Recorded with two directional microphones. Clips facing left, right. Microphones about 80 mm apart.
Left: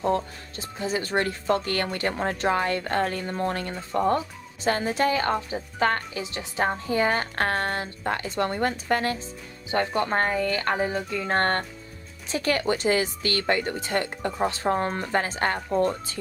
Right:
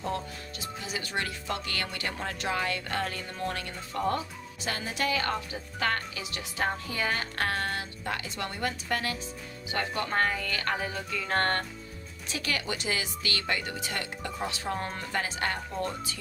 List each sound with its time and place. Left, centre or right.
0.0 s speech: left